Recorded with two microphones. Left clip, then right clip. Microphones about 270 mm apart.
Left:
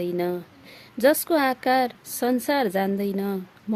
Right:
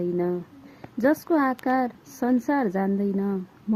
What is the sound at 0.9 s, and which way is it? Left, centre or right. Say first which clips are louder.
A woman's voice: left 2 dB; left.